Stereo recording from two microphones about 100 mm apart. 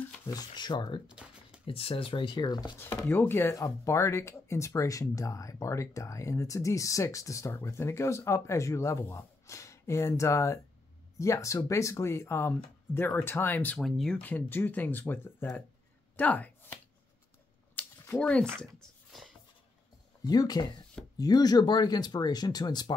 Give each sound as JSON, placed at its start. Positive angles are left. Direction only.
{"t": 0.3, "sound": "speech", "side_deg": 45}
{"t": 1.0, "sound": "a sound", "side_deg": -10}
{"t": 1.7, "sound": "speech", "side_deg": 70}
{"t": 2.8, "sound": "speech", "side_deg": 25}
{"t": 13.7, "sound": "speech", "side_deg": 5}
{"t": 14.2, "sound": "speech", "side_deg": 20}
{"t": 17.8, "sound": "a sound", "side_deg": 15}
{"t": 18.2, "sound": "speech", "side_deg": 10}
{"t": 18.8, "sound": "a sound", "side_deg": 5}
{"t": 20.2, "sound": "speech", "side_deg": 40}